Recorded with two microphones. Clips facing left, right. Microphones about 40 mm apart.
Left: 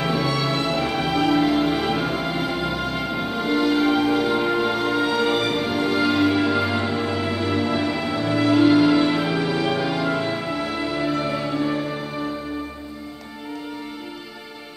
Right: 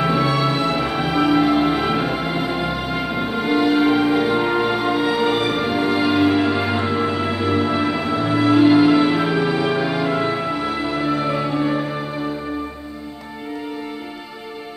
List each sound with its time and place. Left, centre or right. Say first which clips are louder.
0.0 s music: right 4 dB; centre